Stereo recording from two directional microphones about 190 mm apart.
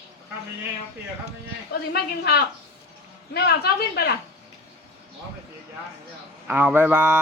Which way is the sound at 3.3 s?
55° left (ahead or behind).